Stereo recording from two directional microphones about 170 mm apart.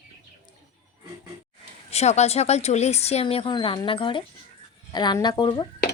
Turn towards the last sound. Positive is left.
turn(degrees=25)  # may be behind; listen again after turning